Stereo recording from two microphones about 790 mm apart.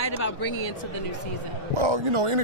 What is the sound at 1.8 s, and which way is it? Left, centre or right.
Speech, right.